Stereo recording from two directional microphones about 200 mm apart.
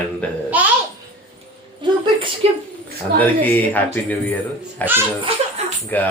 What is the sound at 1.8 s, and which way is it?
Speech, 25° right (ahead or behind).